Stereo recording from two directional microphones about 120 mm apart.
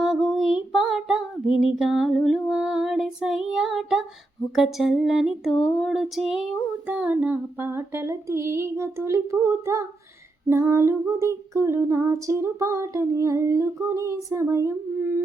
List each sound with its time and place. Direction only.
0.0 s child singing: centre (ahead or behind)
4.5 s a sound: centre (ahead or behind)
6.8 s female singing: 10° right (ahead or behind)